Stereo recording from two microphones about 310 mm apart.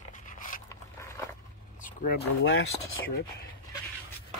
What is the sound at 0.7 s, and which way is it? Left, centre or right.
Zipper, centre.